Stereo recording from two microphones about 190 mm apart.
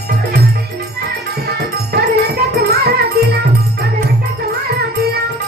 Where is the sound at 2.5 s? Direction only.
60° right (ahead or behind).